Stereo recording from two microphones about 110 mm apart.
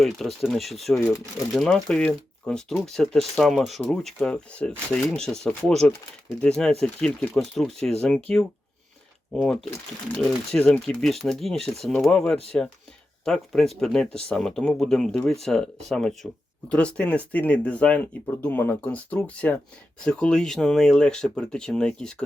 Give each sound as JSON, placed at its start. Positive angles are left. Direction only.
{"t": 0.0, "sound": "speech", "side_deg": 0}